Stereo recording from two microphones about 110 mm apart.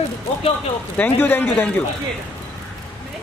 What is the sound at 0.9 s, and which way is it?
Speech, 15° left (ahead or behind).